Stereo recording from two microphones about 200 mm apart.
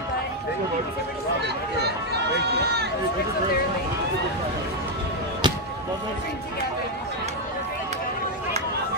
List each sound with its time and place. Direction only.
5.4 s music: 25° right (ahead or behind)